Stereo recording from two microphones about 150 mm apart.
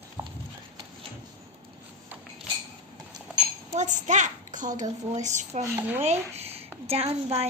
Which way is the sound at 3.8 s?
55° right (ahead or behind).